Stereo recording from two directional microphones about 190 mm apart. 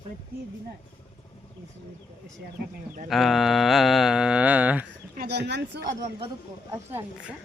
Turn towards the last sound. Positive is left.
turn(degrees=-10)  # may be behind; listen again after turning